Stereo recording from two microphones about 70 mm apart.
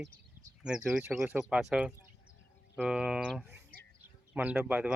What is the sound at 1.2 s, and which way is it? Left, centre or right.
Speech, right.